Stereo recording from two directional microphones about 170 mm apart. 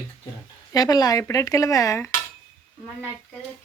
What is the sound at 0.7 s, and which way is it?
Speech, 20° left (ahead or behind).